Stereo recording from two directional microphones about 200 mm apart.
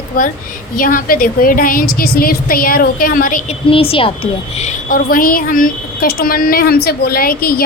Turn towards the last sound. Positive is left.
turn(degrees=45)  # may be behind; listen again after turning